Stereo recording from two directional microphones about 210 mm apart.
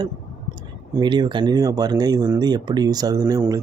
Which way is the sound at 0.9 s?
20° right (ahead or behind).